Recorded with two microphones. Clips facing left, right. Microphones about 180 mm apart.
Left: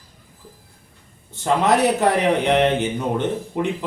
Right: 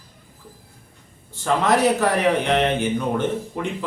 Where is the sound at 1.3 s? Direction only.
20° left (ahead or behind).